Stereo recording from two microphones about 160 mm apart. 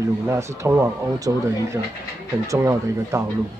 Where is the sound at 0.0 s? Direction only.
20° right (ahead or behind).